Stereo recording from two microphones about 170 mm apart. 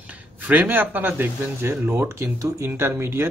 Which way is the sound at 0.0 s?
10° right (ahead or behind).